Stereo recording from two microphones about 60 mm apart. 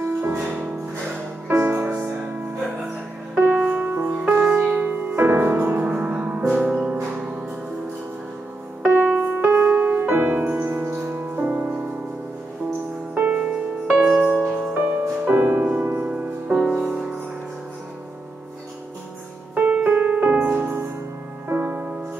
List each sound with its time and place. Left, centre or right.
0.0 s music: right
0.4 s music: centre
1.5 s music: right
3.5 s music: right
4.3 s music: right
8.8 s music: right
13.1 s music: right
13.9 s music: centre
14.2 s music: right
16.5 s music: centre
19.5 s piano: right
20.5 s music: right